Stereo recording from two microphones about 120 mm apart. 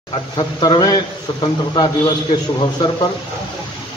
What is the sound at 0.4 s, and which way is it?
Speech, 40° left (ahead or behind).